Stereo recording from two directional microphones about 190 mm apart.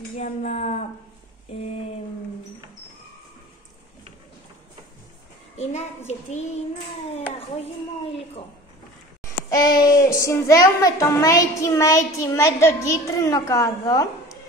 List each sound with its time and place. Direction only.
0.2 s a sound: 40° left (ahead or behind)
5.6 s a child's voice: 35° left (ahead or behind)
9.5 s a child's voice: 20° left (ahead or behind)